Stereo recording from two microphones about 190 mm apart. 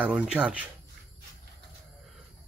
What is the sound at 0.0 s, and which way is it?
Speech, 5° right (ahead or behind).